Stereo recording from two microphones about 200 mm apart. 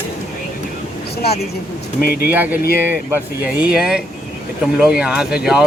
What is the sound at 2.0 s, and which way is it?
Speech, 50° left (ahead or behind).